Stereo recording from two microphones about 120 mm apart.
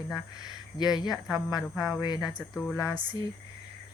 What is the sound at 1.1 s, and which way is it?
Speech, 5° right (ahead or behind).